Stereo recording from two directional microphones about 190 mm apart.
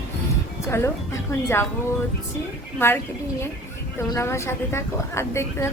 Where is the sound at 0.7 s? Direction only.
15° left (ahead or behind).